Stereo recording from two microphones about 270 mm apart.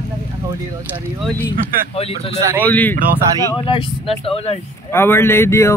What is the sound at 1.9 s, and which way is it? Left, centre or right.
Speech, left.